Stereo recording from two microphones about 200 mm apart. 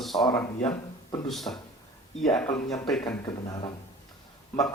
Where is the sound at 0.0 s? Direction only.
Centre (ahead or behind).